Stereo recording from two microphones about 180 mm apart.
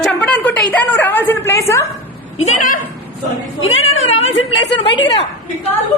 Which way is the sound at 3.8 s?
90° left.